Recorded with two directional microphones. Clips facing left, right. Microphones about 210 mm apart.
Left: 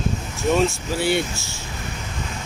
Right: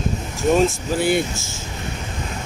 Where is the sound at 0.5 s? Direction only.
50° right (ahead or behind).